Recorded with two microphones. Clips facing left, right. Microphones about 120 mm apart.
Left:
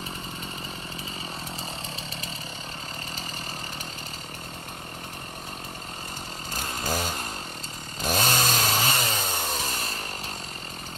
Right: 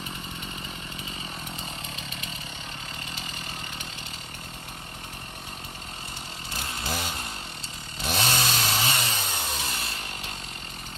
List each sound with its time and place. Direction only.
6.5 s chainsaw: 40° left (ahead or behind)